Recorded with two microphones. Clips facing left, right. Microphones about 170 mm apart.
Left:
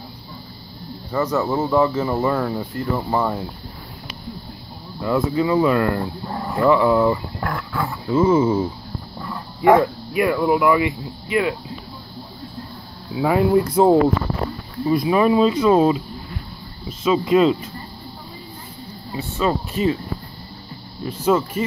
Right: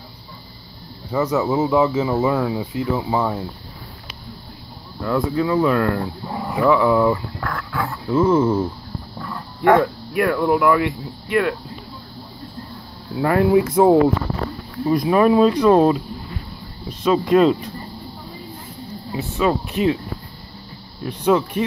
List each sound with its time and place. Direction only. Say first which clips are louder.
1.1 s speech: right 1 dB; 10° right (ahead or behind)
5.0 s speech: left 1 dB; 5° left (ahead or behind)
7.3 s speech: left 1 dB; 20° left (ahead or behind)
7.7 s speech: right 1 dB; 5° left (ahead or behind)
13.1 s speech: right 1 dB; centre (ahead or behind)
19.1 s speech: right 2 dB; centre (ahead or behind)
21.0 s speech: right 1 dB; 5° left (ahead or behind)